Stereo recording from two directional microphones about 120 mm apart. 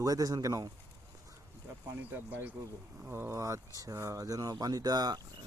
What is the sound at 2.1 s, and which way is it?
Speech, 15° right (ahead or behind).